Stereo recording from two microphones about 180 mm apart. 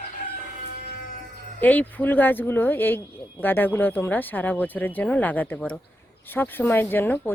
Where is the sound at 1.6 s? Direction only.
10° left (ahead or behind).